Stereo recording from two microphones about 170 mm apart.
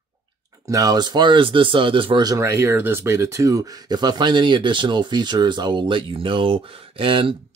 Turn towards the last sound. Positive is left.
turn(degrees=-30)  # may be behind; listen again after turning